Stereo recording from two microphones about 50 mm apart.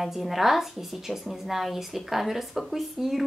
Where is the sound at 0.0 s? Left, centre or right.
Centre.